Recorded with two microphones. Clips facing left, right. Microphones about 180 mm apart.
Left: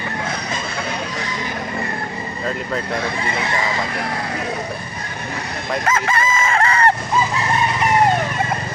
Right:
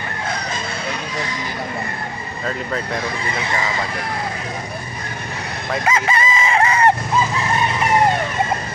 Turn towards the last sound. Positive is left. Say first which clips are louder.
# right 1 dB
turn(degrees=-15)  # may be behind; listen again after turning